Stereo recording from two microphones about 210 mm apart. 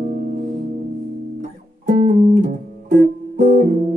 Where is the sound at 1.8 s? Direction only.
40° right (ahead or behind).